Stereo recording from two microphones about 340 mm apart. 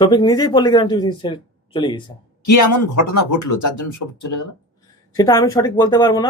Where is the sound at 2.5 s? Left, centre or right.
Left.